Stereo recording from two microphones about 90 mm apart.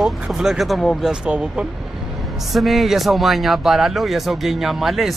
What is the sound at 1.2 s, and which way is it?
Speech, 10° right (ahead or behind).